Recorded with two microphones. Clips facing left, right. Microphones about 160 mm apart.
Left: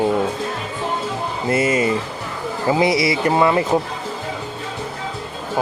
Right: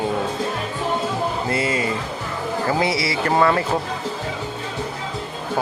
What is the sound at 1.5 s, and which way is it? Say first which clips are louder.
Music: left 8 dB; 25° left (ahead or behind).